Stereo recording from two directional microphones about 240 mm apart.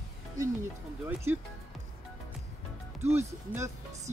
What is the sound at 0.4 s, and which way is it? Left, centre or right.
Speech, centre.